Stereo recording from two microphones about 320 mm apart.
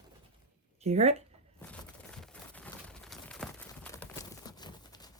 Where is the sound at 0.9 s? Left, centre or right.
Centre.